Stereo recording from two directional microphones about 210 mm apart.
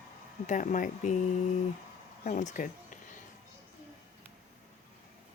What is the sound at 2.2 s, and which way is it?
Speech, 35° left (ahead or behind).